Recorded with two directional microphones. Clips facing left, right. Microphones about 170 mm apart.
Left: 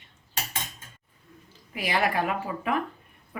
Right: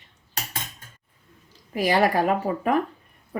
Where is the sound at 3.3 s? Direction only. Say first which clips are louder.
Right 8 dB; 40° right (ahead or behind).